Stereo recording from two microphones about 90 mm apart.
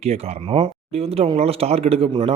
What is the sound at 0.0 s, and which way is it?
A man's voice, 90° right.